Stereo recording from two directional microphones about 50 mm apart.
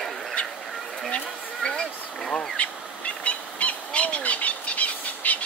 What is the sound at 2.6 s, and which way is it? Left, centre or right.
Bird, left.